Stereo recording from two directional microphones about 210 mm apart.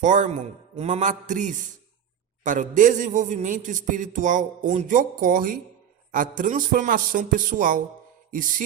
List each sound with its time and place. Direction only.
0.0 s a man's voice: 35° right (ahead or behind)